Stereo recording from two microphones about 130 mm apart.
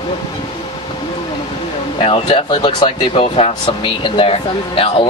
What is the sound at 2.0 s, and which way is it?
Speech, 40° left (ahead or behind).